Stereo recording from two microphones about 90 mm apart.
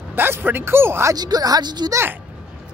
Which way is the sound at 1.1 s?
45° right (ahead or behind).